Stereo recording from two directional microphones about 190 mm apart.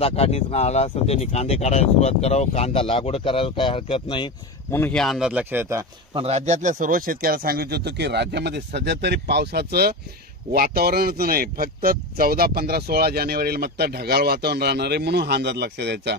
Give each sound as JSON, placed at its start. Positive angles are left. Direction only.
{"t": 0.0, "sound": "speech", "side_deg": 30}
{"t": 4.6, "sound": "speech", "side_deg": 10}
{"t": 6.1, "sound": "speech", "side_deg": -35}